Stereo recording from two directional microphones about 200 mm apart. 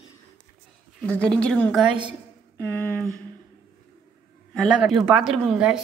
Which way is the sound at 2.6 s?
10° left (ahead or behind).